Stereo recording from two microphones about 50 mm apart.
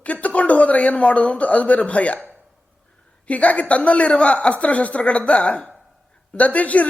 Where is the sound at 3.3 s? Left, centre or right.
Left.